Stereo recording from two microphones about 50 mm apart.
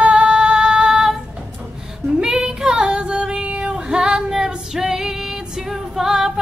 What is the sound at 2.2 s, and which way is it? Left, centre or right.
Female singing, centre.